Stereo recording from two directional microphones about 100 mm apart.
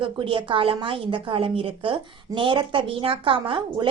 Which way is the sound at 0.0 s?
55° right (ahead or behind).